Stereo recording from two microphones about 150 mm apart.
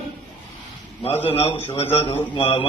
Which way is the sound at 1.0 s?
40° left (ahead or behind).